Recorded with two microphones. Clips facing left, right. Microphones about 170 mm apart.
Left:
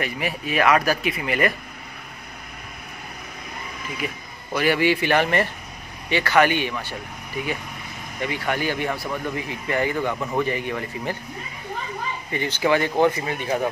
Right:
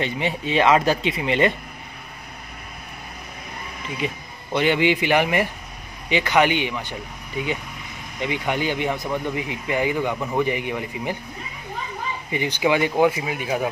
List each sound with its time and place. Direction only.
0.0 s speech: 25° right (ahead or behind)
4.0 s a man's voice: 25° right (ahead or behind)
12.3 s speech: 15° right (ahead or behind)